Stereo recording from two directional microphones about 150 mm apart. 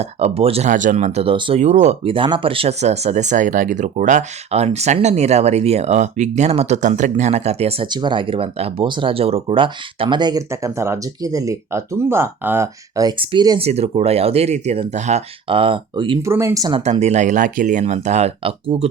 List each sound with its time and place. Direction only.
0.0 s speech: 45° right (ahead or behind)
0.7 s speech: 60° right (ahead or behind)
7.9 s speech: 30° right (ahead or behind)
13.6 s speech: 45° right (ahead or behind)
15.4 s speech: 35° right (ahead or behind)
16.2 s speech: 15° right (ahead or behind)
16.7 s speech: 45° right (ahead or behind)